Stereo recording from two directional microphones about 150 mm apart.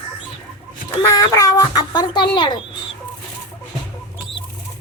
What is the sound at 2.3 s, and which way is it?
Speech, 30° left (ahead or behind).